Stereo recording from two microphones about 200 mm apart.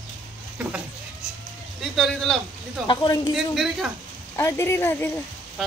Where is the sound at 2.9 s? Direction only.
20° left (ahead or behind).